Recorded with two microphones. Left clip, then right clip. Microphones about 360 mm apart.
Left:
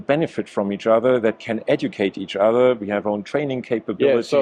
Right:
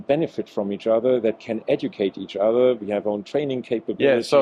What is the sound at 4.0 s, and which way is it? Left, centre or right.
Speech, right.